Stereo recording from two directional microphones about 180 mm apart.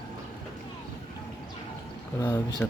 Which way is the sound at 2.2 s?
20° left (ahead or behind).